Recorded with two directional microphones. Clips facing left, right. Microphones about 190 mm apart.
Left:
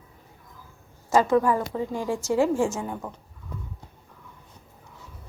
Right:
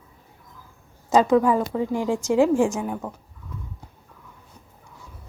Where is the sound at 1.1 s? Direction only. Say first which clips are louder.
Right 3 dB; 15° right (ahead or behind).